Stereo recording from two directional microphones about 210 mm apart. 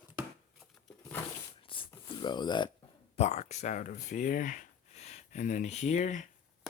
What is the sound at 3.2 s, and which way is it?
Speech, 30° left (ahead or behind).